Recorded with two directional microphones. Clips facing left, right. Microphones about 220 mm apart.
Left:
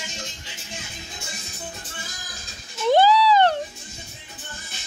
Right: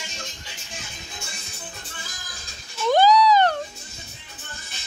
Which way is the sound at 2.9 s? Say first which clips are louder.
Even; 25° left (ahead or behind).